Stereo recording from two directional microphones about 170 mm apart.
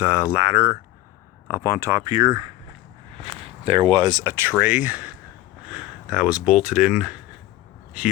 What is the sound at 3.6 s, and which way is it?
Speech, 35° right (ahead or behind).